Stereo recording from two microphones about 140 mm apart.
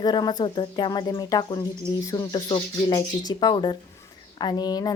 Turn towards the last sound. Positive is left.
turn(degrees=30)  # may be behind; listen again after turning